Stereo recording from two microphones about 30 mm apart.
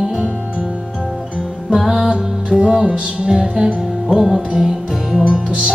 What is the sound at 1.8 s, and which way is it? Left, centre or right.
Music, centre.